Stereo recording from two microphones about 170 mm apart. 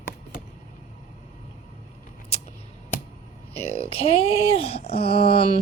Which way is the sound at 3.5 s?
35° left (ahead or behind).